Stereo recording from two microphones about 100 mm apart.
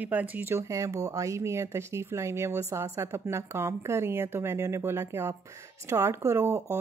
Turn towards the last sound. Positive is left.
turn(degrees=-25)  # may be behind; listen again after turning